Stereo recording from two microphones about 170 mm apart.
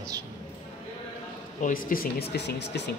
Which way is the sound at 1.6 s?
55° left (ahead or behind).